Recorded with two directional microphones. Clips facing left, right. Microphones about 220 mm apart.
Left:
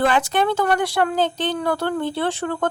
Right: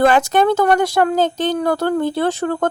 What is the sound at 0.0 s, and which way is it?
A woman's voice, 45° right (ahead or behind).